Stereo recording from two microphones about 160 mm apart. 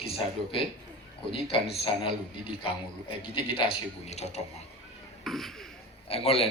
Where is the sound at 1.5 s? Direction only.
35° left (ahead or behind).